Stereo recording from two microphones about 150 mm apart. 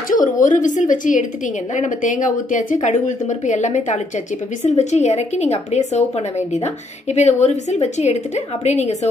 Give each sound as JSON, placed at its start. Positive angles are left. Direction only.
{"t": 0.1, "sound": "speech", "side_deg": 60}
{"t": 7.2, "sound": "speech", "side_deg": 50}